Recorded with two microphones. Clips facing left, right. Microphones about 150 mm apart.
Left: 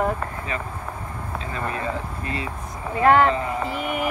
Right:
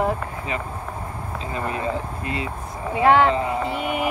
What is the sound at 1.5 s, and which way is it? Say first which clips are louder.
Speech: right 2 dB; 20° right (ahead or behind).